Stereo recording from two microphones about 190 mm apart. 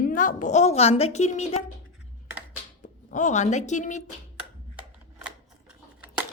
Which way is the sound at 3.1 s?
40° left (ahead or behind).